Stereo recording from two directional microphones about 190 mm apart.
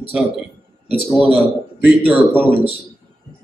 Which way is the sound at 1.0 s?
10° right (ahead or behind).